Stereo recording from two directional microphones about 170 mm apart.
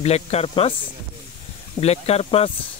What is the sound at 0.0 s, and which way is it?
Speech, 40° left (ahead or behind).